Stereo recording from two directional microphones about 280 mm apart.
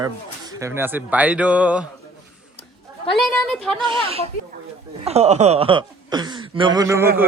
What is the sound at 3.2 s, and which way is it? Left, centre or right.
Speech, centre.